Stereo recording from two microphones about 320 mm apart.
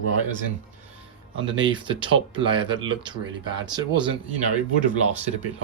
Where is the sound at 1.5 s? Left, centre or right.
Centre.